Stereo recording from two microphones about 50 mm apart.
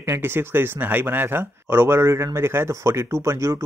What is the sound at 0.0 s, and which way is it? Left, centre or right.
Speech, right.